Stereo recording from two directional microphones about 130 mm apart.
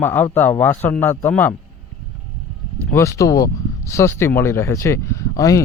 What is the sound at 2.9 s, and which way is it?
Speech, 20° left (ahead or behind).